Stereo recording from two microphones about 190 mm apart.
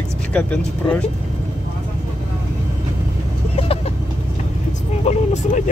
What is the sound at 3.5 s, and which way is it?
Vehicle, 30° left (ahead or behind).